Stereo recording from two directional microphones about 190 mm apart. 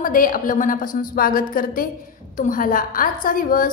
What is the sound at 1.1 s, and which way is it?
A woman's voice, 50° left (ahead or behind).